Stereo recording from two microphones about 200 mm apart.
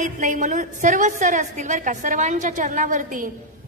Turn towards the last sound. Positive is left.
turn(degrees=-40)  # may be behind; listen again after turning